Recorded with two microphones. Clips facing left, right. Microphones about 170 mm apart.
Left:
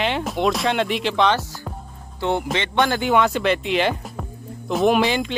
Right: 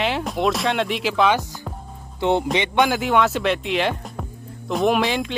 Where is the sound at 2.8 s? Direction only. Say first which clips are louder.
Even; centre (ahead or behind).